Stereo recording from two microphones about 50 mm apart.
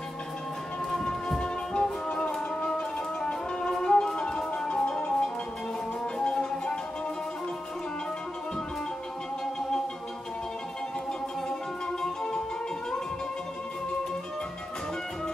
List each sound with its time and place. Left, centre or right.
0.9 s music: centre
12.0 s music: centre